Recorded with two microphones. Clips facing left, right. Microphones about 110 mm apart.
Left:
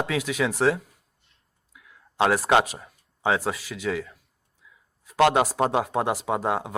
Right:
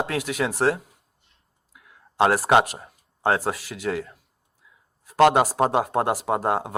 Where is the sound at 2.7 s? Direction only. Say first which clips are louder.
Right 1 dB; 10° right (ahead or behind).